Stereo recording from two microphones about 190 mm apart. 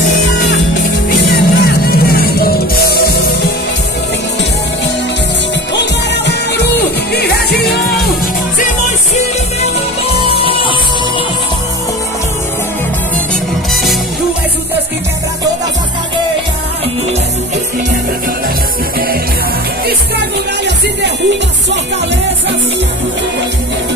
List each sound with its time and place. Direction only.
1.2 s music: 55° left (ahead or behind)
6.2 s music: 60° left (ahead or behind)
10.3 s music: 25° right (ahead or behind)
20.2 s music: 65° right (ahead or behind)